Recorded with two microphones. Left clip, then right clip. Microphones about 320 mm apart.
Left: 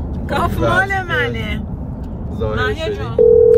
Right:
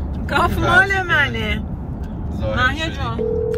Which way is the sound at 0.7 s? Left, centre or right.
Centre.